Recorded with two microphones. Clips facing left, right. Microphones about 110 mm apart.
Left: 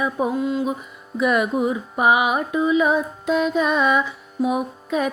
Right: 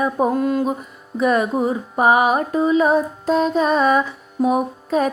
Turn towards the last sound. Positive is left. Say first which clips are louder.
# right 4 dB
turn(degrees=-40)  # may be behind; listen again after turning